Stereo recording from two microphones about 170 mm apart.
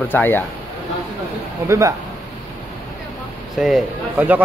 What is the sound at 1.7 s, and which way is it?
Speech, 20° right (ahead or behind).